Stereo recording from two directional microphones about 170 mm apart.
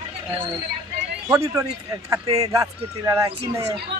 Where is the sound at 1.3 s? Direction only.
20° right (ahead or behind).